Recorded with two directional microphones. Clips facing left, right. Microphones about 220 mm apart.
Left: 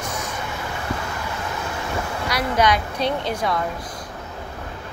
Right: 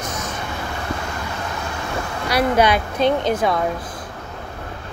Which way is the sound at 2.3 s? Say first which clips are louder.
Right 4 dB; 30° right (ahead or behind).